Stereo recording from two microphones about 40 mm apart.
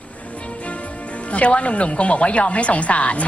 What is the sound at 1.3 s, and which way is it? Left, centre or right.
Speech, left.